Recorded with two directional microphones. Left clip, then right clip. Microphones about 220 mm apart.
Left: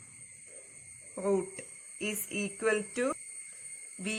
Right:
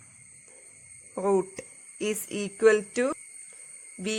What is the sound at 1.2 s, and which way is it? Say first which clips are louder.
A woman's voice: right 6 dB; 50° right (ahead or behind).